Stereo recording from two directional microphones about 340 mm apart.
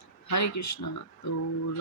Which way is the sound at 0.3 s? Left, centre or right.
Left.